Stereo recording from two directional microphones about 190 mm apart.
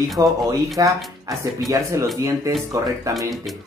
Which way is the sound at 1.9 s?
15° right (ahead or behind).